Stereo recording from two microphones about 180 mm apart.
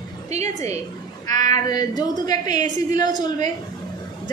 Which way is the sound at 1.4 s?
20° left (ahead or behind).